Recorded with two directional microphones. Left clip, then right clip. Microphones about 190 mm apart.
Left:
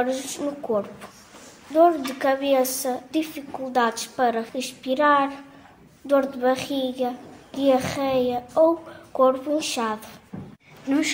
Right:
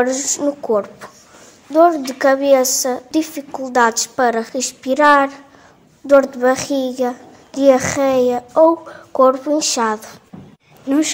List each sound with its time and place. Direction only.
0.0 s a child's voice: 35° right (ahead or behind)